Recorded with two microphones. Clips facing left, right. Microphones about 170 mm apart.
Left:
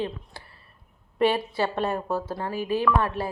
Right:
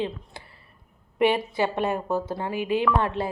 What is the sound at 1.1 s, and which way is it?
Speech, 15° right (ahead or behind).